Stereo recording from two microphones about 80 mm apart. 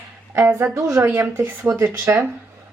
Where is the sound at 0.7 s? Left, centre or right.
Right.